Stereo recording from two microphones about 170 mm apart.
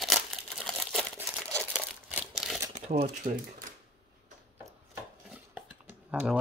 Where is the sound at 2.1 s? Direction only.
5° right (ahead or behind).